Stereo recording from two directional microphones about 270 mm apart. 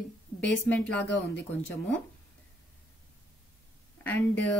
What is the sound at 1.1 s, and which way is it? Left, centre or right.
Speech, left.